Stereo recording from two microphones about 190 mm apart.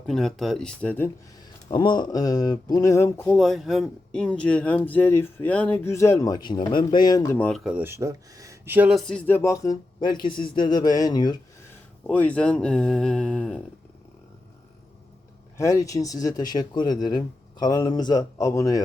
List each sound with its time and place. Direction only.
0.1 s speech: centre (ahead or behind)
1.7 s speech: 25° left (ahead or behind)
7.3 s speech: 5° left (ahead or behind); by 11.3 s 20° left (ahead or behind)
12.0 s speech: 5° left (ahead or behind)
15.5 s speech: 15° left (ahead or behind)